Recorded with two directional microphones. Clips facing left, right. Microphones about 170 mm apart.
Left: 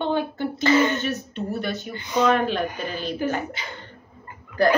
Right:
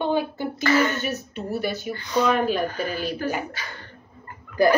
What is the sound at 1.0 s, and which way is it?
Speech, 5° right (ahead or behind).